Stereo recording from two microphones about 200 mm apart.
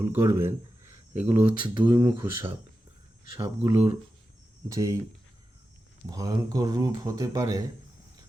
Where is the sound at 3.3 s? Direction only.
15° right (ahead or behind).